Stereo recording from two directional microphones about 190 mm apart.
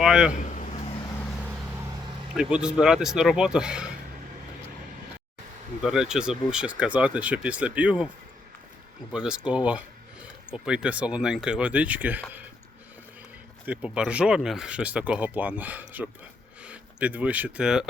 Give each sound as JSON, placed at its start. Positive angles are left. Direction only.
{"t": 0.0, "sound": "speech", "side_deg": -5}
{"t": 0.3, "sound": "a sound", "side_deg": 40}
{"t": 1.4, "sound": "vehicle", "side_deg": -5}
{"t": 2.3, "sound": "speech", "side_deg": -5}
{"t": 5.8, "sound": "speech", "side_deg": -5}
{"t": 9.1, "sound": "speech", "side_deg": -5}
{"t": 13.7, "sound": "speech", "side_deg": -5}